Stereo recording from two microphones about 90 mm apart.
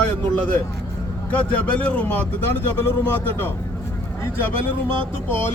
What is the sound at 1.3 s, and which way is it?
Speech, 20° left (ahead or behind).